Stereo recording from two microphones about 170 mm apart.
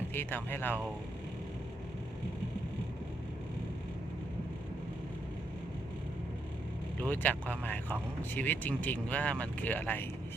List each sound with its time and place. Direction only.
0.1 s speech: 10° left (ahead or behind)
7.0 s speech: 10° left (ahead or behind)